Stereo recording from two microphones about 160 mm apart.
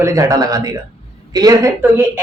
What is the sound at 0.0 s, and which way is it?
Speech, 20° right (ahead or behind).